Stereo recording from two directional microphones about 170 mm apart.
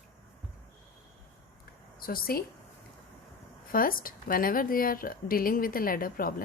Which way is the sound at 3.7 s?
55° left (ahead or behind).